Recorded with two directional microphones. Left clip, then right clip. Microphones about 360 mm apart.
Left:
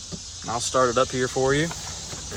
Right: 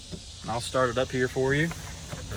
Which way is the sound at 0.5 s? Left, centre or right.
Centre.